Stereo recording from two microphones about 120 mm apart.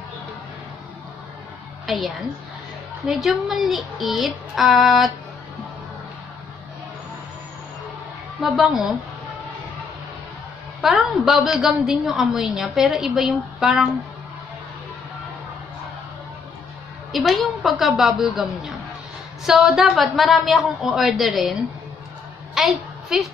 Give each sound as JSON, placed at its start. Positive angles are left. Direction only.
{"t": 1.9, "sound": "a woman's voice", "side_deg": 0}
{"t": 8.4, "sound": "a woman's voice", "side_deg": 0}
{"t": 10.8, "sound": "a woman's voice", "side_deg": -5}
{"t": 17.1, "sound": "a woman's voice", "side_deg": 0}
{"t": 22.5, "sound": "a sound", "side_deg": 0}